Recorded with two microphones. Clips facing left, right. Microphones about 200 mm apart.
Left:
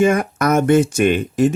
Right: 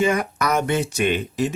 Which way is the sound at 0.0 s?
50° left (ahead or behind).